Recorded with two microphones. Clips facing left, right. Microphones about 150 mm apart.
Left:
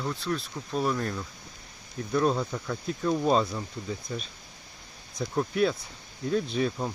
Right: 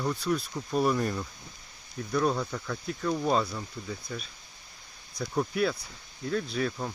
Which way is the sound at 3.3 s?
20° left (ahead or behind).